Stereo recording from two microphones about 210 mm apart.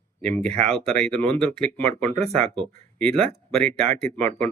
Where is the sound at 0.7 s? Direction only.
Centre (ahead or behind).